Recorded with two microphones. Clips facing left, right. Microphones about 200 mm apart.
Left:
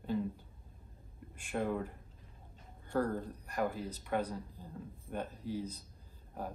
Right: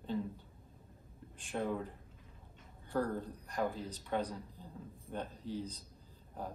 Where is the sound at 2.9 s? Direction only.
5° left (ahead or behind).